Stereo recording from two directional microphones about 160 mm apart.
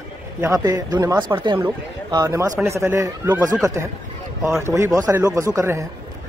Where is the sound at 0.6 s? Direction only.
25° right (ahead or behind).